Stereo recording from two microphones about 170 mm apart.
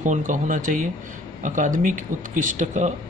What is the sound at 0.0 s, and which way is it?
Speech, 50° right (ahead or behind).